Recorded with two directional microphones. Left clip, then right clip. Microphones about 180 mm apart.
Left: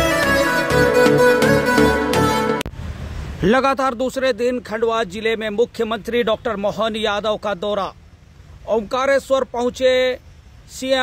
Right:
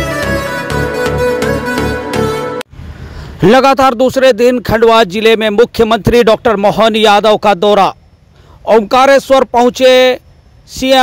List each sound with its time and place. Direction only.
0.1 s music: centre (ahead or behind)
3.3 s speech: 35° right (ahead or behind)